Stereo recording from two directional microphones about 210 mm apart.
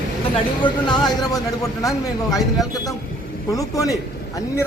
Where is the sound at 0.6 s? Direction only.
20° left (ahead or behind).